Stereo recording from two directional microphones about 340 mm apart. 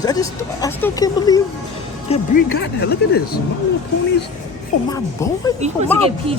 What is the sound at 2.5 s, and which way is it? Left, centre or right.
Speech, left.